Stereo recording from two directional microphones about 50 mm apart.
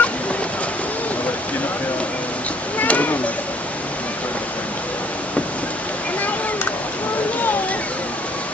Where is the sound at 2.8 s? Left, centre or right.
Left.